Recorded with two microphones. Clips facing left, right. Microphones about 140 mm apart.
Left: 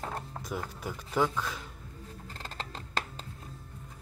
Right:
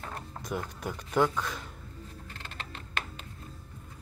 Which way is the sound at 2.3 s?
35° left (ahead or behind).